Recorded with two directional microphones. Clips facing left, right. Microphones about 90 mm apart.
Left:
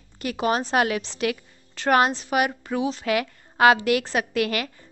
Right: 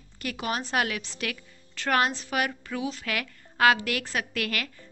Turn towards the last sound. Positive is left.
turn(degrees=20)  # may be behind; listen again after turning